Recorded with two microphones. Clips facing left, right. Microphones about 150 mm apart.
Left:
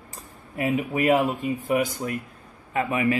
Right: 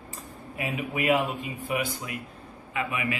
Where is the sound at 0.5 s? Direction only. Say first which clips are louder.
Left 7 dB; 40° left (ahead or behind).